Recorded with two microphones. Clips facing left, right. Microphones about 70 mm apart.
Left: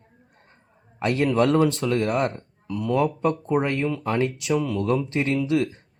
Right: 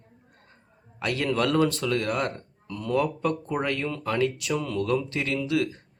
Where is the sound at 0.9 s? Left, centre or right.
Left.